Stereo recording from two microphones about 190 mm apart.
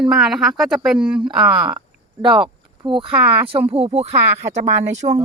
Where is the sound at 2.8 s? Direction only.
25° right (ahead or behind).